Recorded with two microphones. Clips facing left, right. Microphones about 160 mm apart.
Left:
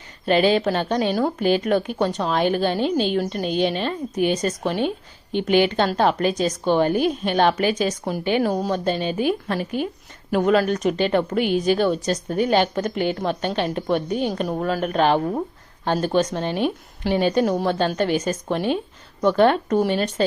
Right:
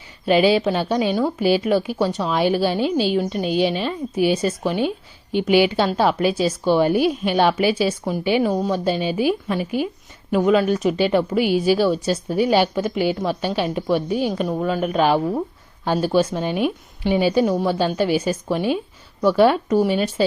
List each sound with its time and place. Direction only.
0.3 s a woman's voice: 10° right (ahead or behind)